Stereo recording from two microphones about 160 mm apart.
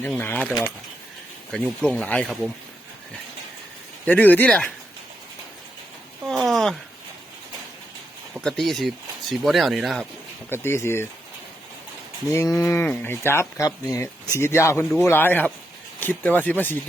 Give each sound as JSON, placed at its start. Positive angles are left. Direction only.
{"t": 0.2, "sound": "speech", "side_deg": 10}
{"t": 1.5, "sound": "speech", "side_deg": 5}
{"t": 4.0, "sound": "speech", "side_deg": 10}
{"t": 6.2, "sound": "a sound", "side_deg": 0}
{"t": 8.4, "sound": "speech", "side_deg": 5}
{"t": 10.5, "sound": "speech", "side_deg": 15}
{"t": 12.3, "sound": "cattle", "side_deg": 20}
{"t": 12.6, "sound": "speech", "side_deg": 15}